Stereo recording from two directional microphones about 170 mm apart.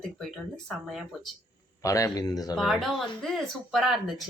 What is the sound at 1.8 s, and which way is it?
Speech, 20° left (ahead or behind).